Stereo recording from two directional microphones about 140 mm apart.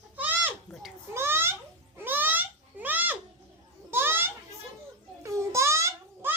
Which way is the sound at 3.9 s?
15° right (ahead or behind).